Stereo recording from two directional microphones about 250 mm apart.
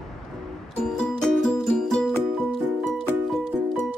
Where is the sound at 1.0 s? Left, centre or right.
Centre.